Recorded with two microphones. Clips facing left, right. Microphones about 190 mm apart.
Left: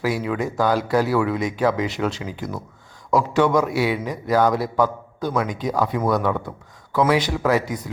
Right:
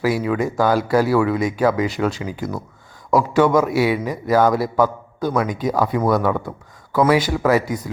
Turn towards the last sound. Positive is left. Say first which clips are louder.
# right 3 dB
turn(degrees=-5)  # may be behind; listen again after turning